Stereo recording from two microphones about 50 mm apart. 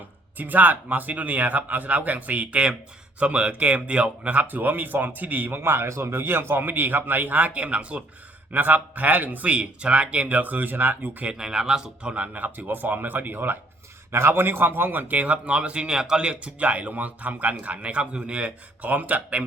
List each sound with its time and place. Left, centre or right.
0.3 s speech: right
8.5 s speech: right
11.3 s speech: centre
12.0 s a man's voice: right
18.8 s speech: right